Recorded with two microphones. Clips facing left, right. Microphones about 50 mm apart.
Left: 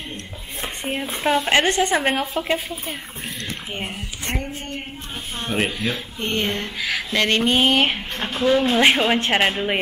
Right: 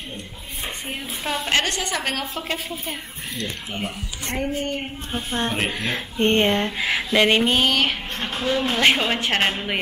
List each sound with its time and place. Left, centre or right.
1.2 s a woman's voice: centre
3.7 s a woman's voice: left
4.6 s speech: right
7.1 s a sound: centre
7.6 s a woman's voice: left